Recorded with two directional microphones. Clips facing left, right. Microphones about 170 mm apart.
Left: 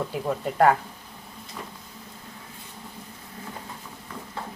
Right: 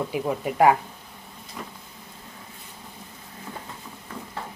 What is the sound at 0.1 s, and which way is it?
Speech, 10° right (ahead or behind).